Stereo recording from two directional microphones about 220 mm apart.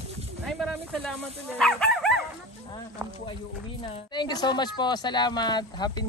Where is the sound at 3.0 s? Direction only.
15° right (ahead or behind).